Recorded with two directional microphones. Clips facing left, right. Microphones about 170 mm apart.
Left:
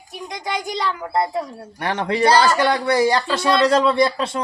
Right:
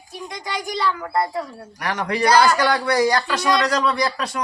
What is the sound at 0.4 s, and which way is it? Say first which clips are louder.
A woman's voice: even; 20° left (ahead or behind).